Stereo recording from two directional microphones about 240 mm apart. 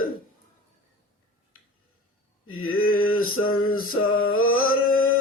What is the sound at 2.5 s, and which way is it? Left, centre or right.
Mantra, left.